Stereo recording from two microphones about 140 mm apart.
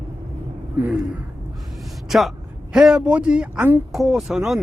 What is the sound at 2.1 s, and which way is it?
A man's voice, centre (ahead or behind).